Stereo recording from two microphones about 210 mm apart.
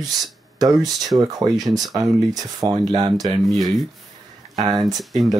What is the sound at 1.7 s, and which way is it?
Speech, 15° right (ahead or behind).